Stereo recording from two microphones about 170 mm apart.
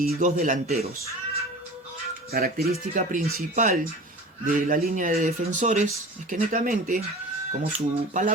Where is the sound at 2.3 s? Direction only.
60° right (ahead or behind).